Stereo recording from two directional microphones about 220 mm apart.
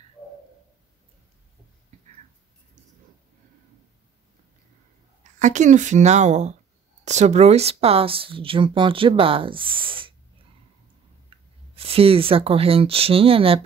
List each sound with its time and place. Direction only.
5.4 s speech: 35° right (ahead or behind)
11.2 s speech: 25° right (ahead or behind)